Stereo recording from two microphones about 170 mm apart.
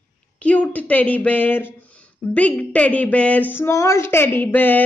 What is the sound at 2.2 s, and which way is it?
Speech, 10° left (ahead or behind).